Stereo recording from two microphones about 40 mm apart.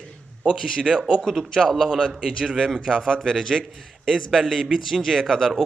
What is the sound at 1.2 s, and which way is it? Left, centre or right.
Speech, centre.